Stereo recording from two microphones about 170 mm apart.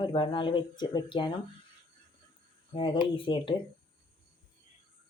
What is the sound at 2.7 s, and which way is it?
Speech, 30° left (ahead or behind).